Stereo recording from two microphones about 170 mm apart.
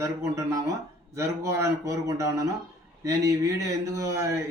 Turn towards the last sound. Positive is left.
turn(degrees=-20)  # may be behind; listen again after turning